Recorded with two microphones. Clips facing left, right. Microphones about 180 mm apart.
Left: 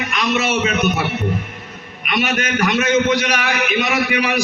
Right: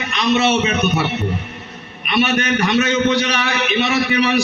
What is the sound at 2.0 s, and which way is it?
A man's voice, 30° right (ahead or behind).